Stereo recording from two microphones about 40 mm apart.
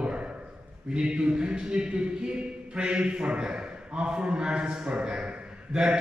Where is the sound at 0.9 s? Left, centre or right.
Right.